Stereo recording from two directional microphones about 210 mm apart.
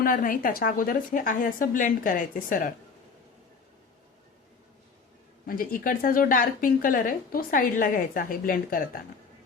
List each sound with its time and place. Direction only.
0.0 s a woman's voice: 40° left (ahead or behind)
5.5 s a woman's voice: 40° left (ahead or behind)